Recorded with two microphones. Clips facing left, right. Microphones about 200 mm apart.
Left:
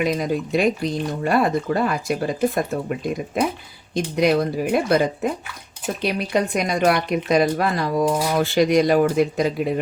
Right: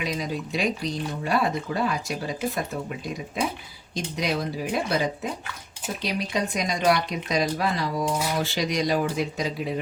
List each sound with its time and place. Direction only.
0.0 s speech: 55° left (ahead or behind)